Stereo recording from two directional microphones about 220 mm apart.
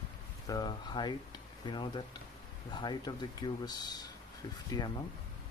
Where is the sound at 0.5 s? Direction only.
20° left (ahead or behind).